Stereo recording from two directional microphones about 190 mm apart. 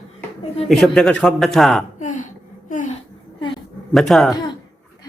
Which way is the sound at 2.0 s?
40° left (ahead or behind).